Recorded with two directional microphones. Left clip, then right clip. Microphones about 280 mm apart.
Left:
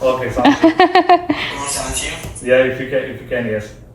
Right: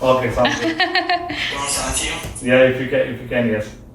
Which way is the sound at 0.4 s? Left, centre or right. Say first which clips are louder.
Left 7 dB; centre.